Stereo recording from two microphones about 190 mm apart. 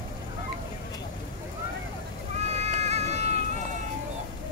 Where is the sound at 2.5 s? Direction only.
35° right (ahead or behind).